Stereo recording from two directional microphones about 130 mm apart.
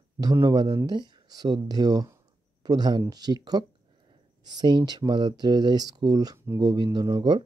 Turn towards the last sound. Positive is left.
turn(degrees=-35)  # may be behind; listen again after turning